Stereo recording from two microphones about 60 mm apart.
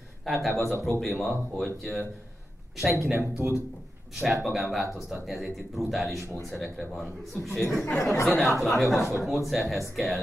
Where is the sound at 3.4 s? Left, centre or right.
Right.